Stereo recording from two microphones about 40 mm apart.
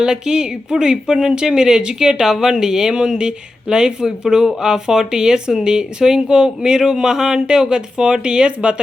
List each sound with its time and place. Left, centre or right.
0.0 s speech: centre